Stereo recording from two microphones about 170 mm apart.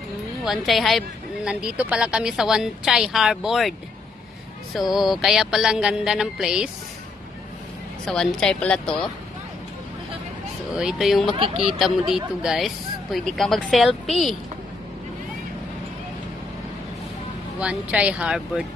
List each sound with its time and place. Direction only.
0.5 s speech: centre (ahead or behind)
4.9 s speech: centre (ahead or behind)
8.0 s speech: 5° left (ahead or behind)
10.8 s speech: centre (ahead or behind)
11.3 s speech: 30° right (ahead or behind)
12.4 s speech: centre (ahead or behind)
17.6 s speech: 5° right (ahead or behind)